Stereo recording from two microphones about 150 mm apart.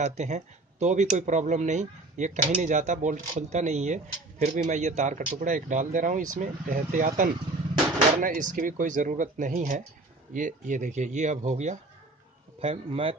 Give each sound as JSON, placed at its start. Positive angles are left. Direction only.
{"t": 0.0, "sound": "speech", "side_deg": -50}